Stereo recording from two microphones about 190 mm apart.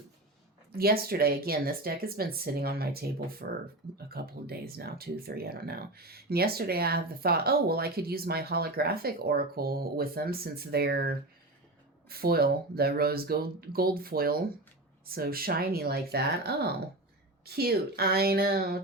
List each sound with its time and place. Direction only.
0.8 s speech: 55° right (ahead or behind)